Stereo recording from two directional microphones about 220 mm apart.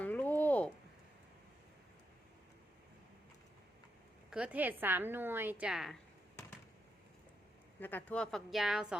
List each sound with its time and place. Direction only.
0.0 s a sound: 5° left (ahead or behind)
4.3 s a woman's voice: 5° right (ahead or behind)
7.8 s speech: 10° left (ahead or behind)